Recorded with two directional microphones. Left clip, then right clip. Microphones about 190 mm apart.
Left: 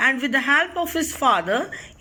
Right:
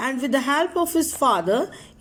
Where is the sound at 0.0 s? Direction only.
30° right (ahead or behind).